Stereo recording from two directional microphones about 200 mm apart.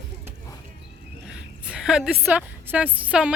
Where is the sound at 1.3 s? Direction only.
5° right (ahead or behind).